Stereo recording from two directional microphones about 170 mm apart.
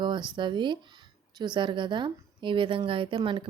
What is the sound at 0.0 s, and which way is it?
Speech, 25° right (ahead or behind).